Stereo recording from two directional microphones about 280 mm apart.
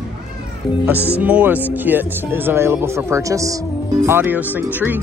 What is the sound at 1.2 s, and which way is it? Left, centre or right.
Speech, centre.